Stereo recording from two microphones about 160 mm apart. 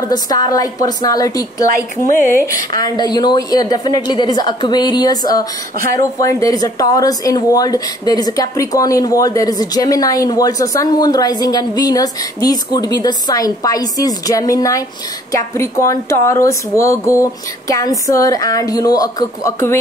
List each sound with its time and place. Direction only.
0.1 s speech: 25° left (ahead or behind)